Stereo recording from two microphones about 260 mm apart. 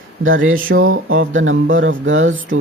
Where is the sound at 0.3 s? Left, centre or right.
Right.